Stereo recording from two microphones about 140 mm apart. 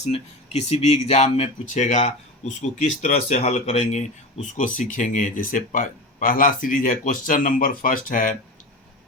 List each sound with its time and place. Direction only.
0.0 s speech: 45° left (ahead or behind); by 8.4 s 75° left (ahead or behind)